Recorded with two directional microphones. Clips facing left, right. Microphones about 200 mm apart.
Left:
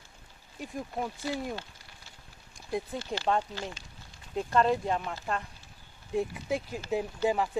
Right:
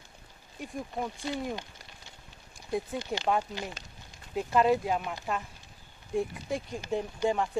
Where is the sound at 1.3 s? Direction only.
15° right (ahead or behind).